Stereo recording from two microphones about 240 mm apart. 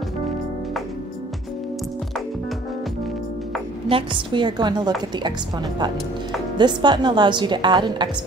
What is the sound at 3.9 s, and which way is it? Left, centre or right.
A woman's voice, centre.